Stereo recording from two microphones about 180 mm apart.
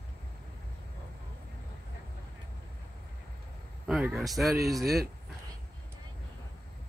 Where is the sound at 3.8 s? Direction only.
5° right (ahead or behind).